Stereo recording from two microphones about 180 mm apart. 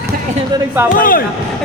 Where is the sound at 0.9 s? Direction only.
50° left (ahead or behind).